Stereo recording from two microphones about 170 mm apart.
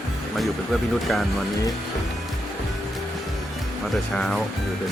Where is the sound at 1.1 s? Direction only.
5° left (ahead or behind).